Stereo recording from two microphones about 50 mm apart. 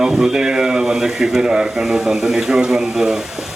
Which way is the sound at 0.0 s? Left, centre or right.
Centre.